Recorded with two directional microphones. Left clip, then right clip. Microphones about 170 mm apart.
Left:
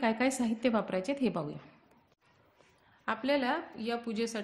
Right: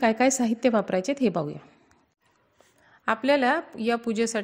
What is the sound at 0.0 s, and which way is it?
A woman's voice, 40° right (ahead or behind).